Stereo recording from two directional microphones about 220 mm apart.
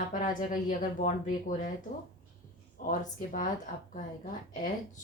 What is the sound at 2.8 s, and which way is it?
Speech, 35° left (ahead or behind).